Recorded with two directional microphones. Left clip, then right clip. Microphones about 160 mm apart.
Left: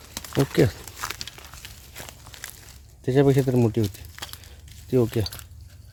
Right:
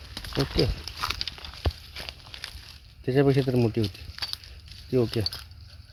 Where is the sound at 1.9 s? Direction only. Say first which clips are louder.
Right 3 dB; 5° left (ahead or behind).